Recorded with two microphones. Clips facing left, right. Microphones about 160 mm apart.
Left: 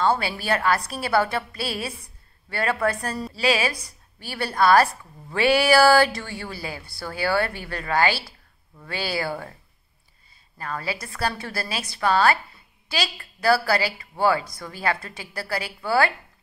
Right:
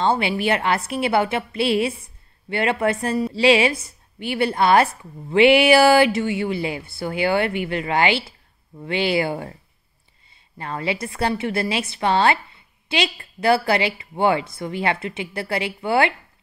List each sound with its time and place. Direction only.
0.0 s speech: 20° right (ahead or behind)
10.6 s speech: 25° right (ahead or behind)